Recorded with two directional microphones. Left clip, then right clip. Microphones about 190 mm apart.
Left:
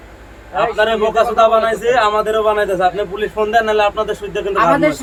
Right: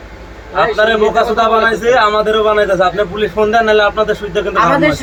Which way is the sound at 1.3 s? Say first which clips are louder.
Right 1 dB; 10° left (ahead or behind).